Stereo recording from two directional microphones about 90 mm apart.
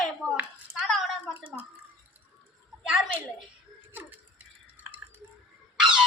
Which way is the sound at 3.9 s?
20° right (ahead or behind).